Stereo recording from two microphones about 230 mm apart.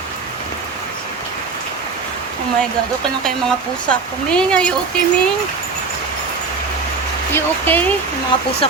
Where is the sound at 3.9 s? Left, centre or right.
Centre.